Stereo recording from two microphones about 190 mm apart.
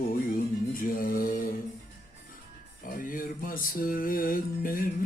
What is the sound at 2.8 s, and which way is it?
Music, 45° left (ahead or behind).